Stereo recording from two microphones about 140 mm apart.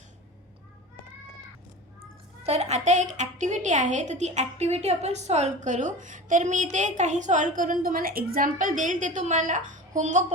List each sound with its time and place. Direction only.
2.4 s a woman's voice: 50° right (ahead or behind)